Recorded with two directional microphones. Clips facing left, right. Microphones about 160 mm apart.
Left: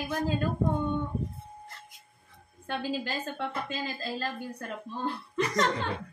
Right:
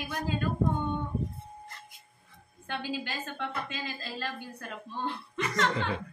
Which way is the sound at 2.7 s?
40° left (ahead or behind).